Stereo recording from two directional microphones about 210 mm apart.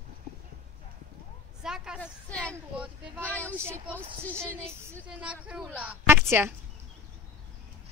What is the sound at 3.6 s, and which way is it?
Speech, 10° right (ahead or behind).